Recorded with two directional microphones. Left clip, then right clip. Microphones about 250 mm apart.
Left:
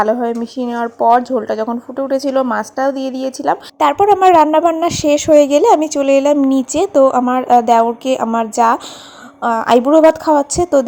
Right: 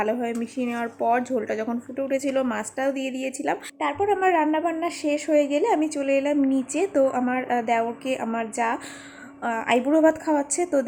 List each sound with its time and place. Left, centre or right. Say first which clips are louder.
0.0 s speech: left 10 dB; centre
3.8 s a woman's voice: left 13 dB; left